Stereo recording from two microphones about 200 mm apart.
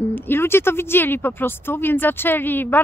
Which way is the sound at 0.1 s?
10° left (ahead or behind).